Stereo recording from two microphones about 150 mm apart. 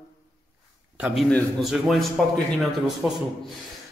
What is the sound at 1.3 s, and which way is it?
Speech, 10° left (ahead or behind).